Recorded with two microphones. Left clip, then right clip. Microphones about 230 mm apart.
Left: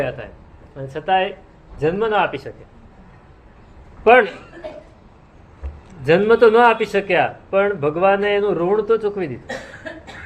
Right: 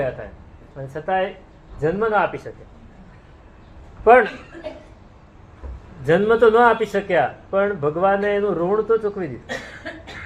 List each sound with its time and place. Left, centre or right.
0.8 s speech: left
4.0 s speech: left
6.1 s speech: left